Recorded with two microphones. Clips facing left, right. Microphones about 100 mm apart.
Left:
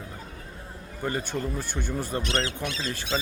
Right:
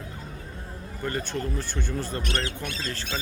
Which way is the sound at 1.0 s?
15° left (ahead or behind).